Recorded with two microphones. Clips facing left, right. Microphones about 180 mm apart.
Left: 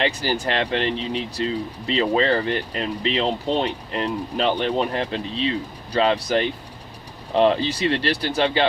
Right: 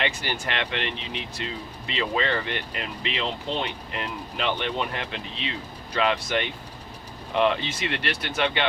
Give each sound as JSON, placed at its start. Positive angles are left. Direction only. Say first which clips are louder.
{"t": 0.0, "sound": "speech", "louder": "left 6 dB", "side_deg": 35}